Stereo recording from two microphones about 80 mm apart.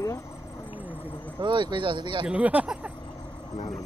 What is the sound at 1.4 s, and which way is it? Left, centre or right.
Speech, right.